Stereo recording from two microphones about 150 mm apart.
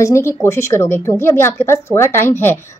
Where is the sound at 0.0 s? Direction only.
20° left (ahead or behind).